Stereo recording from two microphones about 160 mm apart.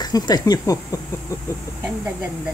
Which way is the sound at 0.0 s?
25° left (ahead or behind).